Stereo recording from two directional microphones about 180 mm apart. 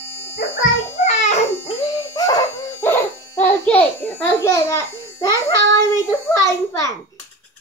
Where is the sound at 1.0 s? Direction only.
40° left (ahead or behind).